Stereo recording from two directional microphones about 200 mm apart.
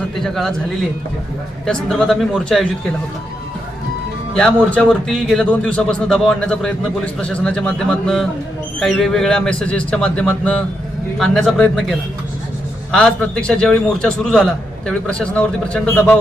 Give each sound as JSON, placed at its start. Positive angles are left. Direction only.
{"t": 0.2, "sound": "a man's voice", "side_deg": 0}
{"t": 1.6, "sound": "a man's voice", "side_deg": 0}
{"t": 4.4, "sound": "a man's voice", "side_deg": 5}